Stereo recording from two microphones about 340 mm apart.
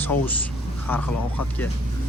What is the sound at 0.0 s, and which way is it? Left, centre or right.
Speech, centre.